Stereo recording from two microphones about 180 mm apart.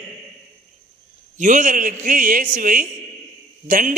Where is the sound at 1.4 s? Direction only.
45° right (ahead or behind).